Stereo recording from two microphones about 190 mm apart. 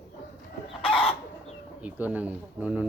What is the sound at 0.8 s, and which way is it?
Chicken, 30° left (ahead or behind).